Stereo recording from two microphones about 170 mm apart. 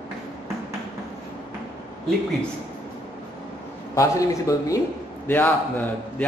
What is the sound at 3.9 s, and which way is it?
Speech, 20° left (ahead or behind).